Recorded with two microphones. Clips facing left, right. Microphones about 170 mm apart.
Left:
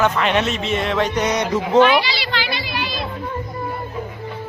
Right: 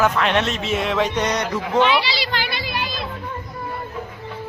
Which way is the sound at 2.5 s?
50° right (ahead or behind).